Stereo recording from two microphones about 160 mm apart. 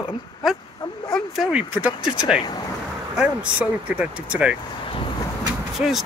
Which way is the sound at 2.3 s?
25° left (ahead or behind).